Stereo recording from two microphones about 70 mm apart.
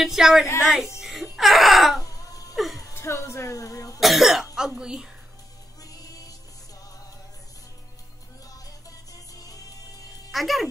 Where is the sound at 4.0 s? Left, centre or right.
Centre.